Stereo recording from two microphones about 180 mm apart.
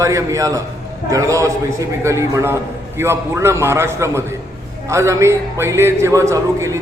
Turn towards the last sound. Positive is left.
turn(degrees=-15)  # may be behind; listen again after turning